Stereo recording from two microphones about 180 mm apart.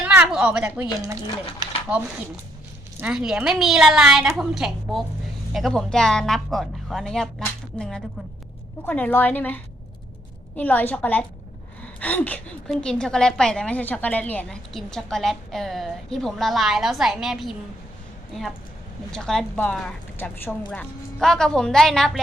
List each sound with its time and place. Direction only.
0.0 s a sound: 5° right (ahead or behind)
0.6 s speech: 15° right (ahead or behind)
3.0 s a woman's voice: 5° right (ahead or behind)
10.6 s a woman's voice: 10° left (ahead or behind)
19.1 s a woman's voice: 5° left (ahead or behind)